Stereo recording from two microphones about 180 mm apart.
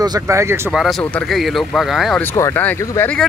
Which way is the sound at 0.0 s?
20° right (ahead or behind).